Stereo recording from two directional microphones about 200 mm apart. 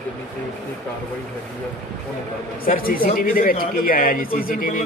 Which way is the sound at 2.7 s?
45° left (ahead or behind).